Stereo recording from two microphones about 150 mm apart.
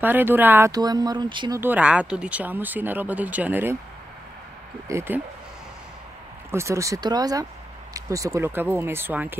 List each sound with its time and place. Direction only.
0.0 s speech: 15° right (ahead or behind)
0.7 s speech: 25° right (ahead or behind)
1.6 s speech: 10° right (ahead or behind)
4.8 s speech: 15° right (ahead or behind)
6.5 s speech: 20° right (ahead or behind)